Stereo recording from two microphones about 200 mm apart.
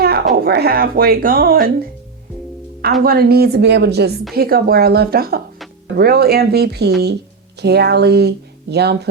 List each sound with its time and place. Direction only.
0.0 s speech: 50° right (ahead or behind)
3.0 s a woman's voice: 50° right (ahead or behind)